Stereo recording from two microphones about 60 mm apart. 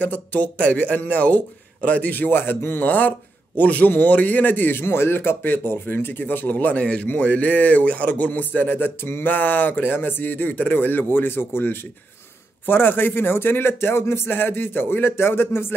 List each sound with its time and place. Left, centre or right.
0.0 s a man's voice: left